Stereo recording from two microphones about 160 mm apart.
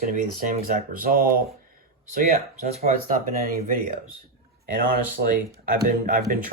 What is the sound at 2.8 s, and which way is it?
Speech, 65° right (ahead or behind).